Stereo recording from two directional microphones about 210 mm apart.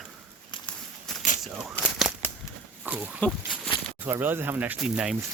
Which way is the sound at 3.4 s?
5° right (ahead or behind).